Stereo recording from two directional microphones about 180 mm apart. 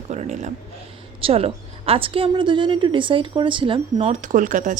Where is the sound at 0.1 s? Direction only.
40° right (ahead or behind).